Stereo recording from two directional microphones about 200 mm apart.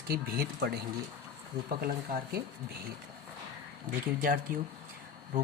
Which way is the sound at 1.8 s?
50° right (ahead or behind).